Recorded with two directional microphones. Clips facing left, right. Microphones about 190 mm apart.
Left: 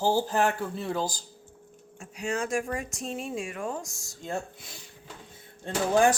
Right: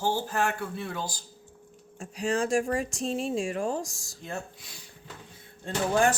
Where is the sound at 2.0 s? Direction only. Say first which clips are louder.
Right 3 dB; 35° right (ahead or behind).